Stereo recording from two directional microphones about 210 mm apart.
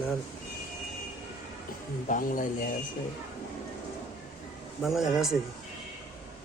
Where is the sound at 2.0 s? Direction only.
40° left (ahead or behind).